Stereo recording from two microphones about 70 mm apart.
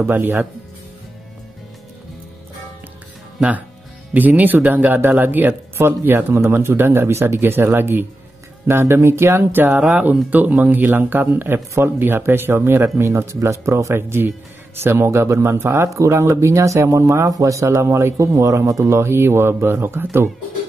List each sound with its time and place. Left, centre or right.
0.0 s speech: right
3.3 s speech: right